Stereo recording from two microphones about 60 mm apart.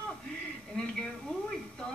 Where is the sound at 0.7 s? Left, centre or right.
Centre.